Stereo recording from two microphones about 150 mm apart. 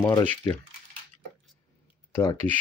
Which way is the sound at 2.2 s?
25° left (ahead or behind).